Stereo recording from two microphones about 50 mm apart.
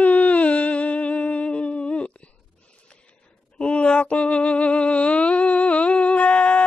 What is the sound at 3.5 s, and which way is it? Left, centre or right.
Music, left.